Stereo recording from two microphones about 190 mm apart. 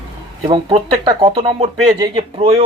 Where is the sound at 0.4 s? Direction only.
30° right (ahead or behind).